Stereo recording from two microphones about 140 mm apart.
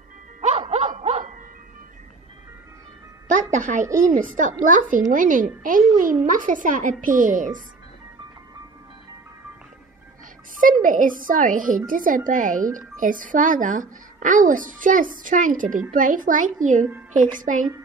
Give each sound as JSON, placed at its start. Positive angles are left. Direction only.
{"t": 0.4, "sound": "music", "side_deg": -50}
{"t": 3.3, "sound": "a woman's voice", "side_deg": -65}
{"t": 10.6, "sound": "a woman's voice", "side_deg": -75}